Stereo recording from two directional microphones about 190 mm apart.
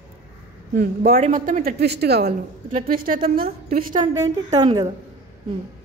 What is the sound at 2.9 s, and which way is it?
Speech, 50° right (ahead or behind).